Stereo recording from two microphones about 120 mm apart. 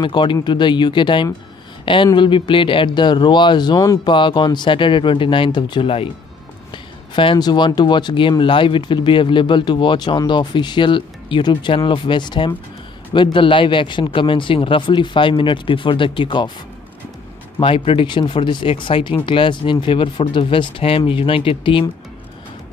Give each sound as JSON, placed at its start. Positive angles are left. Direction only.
{"t": 0.0, "sound": "speech", "side_deg": 40}
{"t": 4.1, "sound": "speech", "side_deg": 40}
{"t": 17.6, "sound": "speech", "side_deg": 50}